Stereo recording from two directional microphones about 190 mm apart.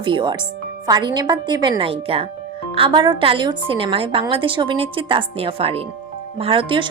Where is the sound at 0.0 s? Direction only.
25° right (ahead or behind).